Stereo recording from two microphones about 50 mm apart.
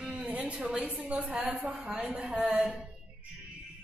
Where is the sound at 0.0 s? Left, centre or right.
Right.